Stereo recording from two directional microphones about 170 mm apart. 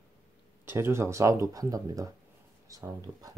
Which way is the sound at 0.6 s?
15° right (ahead or behind).